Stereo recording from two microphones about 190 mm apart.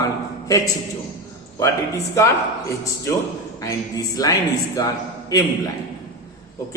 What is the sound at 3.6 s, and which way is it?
A man's voice, 20° left (ahead or behind).